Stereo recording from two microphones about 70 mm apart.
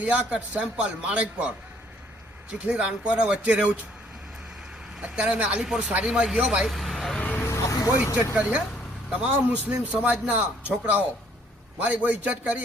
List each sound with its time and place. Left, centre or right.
0.0 s a man's voice: centre
5.0 s a man's voice: centre
6.1 s a man's voice: centre
6.7 s vehicle: centre
7.2 s vehicle: left
7.5 s vehicle: left
8.0 s speech: left
8.4 s a man's voice: centre